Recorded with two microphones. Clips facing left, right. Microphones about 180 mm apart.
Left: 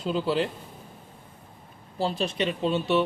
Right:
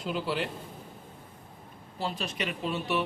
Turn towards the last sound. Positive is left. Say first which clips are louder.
# left 6 dB
turn(degrees=25)  # may be behind; listen again after turning